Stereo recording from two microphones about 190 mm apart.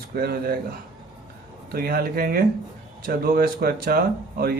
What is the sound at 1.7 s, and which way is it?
Speech, 50° right (ahead or behind).